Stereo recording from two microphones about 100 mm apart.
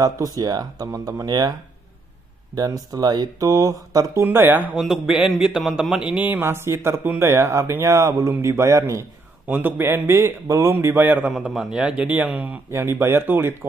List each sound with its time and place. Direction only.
0.0 s speech: 40° right (ahead or behind)
2.5 s speech: 40° right (ahead or behind); by 4.6 s 20° right (ahead or behind)
4.7 s a man's voice: 5° right (ahead or behind)
6.3 s speech: 25° right (ahead or behind)
11.2 s a man's voice: 5° right (ahead or behind); by 13.7 s 20° right (ahead or behind)